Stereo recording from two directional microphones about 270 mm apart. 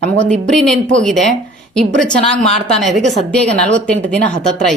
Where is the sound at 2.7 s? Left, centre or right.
Centre.